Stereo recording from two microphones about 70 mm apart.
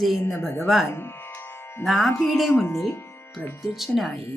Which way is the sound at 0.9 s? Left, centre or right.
Left.